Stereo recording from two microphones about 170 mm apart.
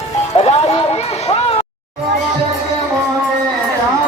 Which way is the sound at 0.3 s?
35° left (ahead or behind).